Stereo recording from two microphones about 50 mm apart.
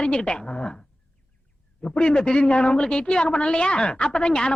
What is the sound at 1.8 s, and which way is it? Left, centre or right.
A woman's voice, centre.